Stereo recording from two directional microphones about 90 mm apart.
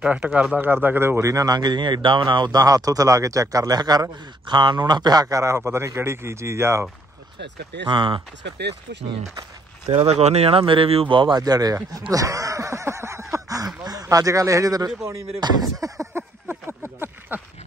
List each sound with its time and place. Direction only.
0.0 s a man's voice: 15° right (ahead or behind); by 6.9 s 30° right (ahead or behind)
7.9 s speech: 60° right (ahead or behind)
9.9 s speech: 90° right; by 11.3 s 65° right (ahead or behind)
11.3 s speech: 45° right (ahead or behind)
12.1 s a sound: 40° right (ahead or behind)
13.8 s a man's voice: 45° right (ahead or behind)
16.1 s a sound: 25° right (ahead or behind)